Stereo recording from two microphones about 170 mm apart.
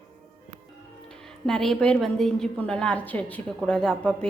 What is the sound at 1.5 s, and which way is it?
A woman's voice, centre (ahead or behind).